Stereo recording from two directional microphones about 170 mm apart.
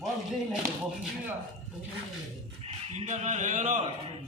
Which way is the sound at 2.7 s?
40° right (ahead or behind).